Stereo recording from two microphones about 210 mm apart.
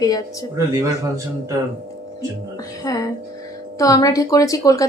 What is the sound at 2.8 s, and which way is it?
Speech, 15° left (ahead or behind).